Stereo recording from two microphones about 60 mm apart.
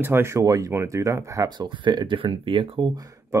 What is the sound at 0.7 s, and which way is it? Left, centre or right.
Speech, right.